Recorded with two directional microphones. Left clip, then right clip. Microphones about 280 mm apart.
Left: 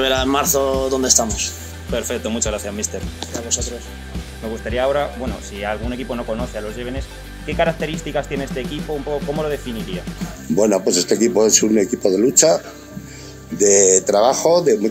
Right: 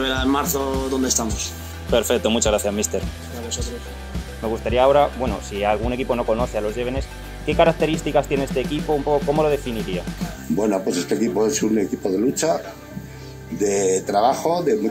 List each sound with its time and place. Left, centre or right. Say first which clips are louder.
0.0 s speech: left 4 dB; left
1.9 s speech: right 4 dB; right
4.6 s speech: right 3 dB; centre
10.5 s a man's voice: left 5 dB; left
13.6 s a man's voice: left 6 dB; left